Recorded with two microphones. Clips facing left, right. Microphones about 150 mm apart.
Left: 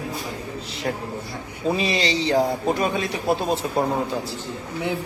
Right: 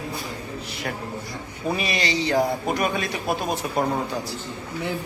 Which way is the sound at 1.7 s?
25° left (ahead or behind).